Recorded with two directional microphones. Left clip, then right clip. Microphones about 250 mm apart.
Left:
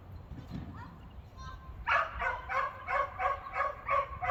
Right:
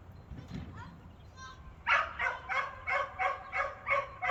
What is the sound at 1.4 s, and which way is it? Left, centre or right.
Bow-wow, right.